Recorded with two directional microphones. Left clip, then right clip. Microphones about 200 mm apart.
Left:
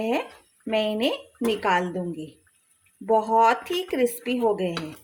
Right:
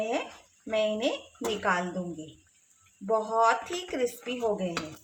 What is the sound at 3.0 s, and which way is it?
Speech, 40° left (ahead or behind).